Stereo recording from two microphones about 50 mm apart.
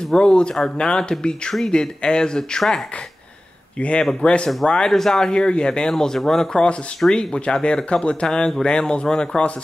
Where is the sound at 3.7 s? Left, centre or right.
Left.